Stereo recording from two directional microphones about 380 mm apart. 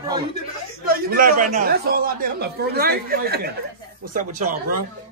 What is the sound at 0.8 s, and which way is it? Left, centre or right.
A man's voice, right.